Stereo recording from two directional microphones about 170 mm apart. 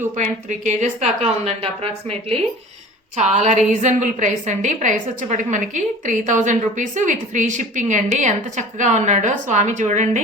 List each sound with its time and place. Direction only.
0.2 s a woman's voice: 45° right (ahead or behind)